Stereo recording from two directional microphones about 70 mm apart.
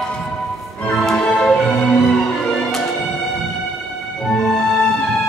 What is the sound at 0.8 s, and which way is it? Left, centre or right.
Music, centre.